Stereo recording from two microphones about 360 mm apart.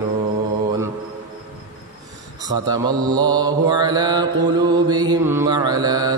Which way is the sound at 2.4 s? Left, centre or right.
Centre.